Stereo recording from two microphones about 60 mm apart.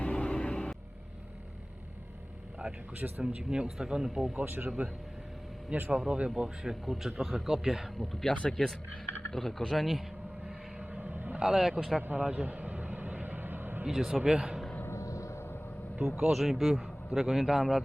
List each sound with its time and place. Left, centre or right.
0.0 s a sound: centre
3.2 s speech: centre
4.4 s speech: right
5.7 s speech: right; by 8.3 s centre
8.3 s a man's voice: centre
10.4 s vehicle: centre
11.4 s speech: centre
12.0 s vehicle: right
13.8 s speech: centre
14.9 s a sound: left
16.0 s speech: centre
16.3 s a man's voice: centre